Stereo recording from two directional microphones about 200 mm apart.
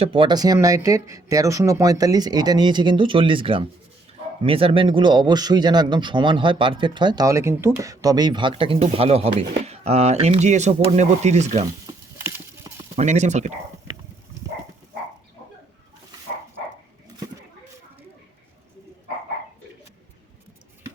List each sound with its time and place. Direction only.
0.0 s a man's voice: 25° right (ahead or behind)
12.2 s clip-clop: 15° right (ahead or behind)
13.0 s speech: 35° right (ahead or behind)